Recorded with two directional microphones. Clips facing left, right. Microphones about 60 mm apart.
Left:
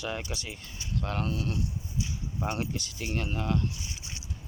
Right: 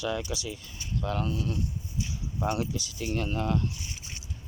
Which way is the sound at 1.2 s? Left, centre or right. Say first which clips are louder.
Right 1 dB; left.